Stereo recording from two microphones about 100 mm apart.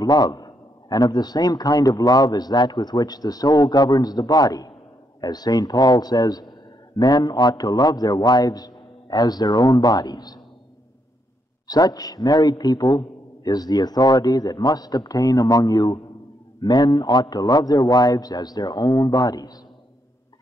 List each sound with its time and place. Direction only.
0.0 s a man's voice: 40° left (ahead or behind)
11.6 s a man's voice: 40° left (ahead or behind)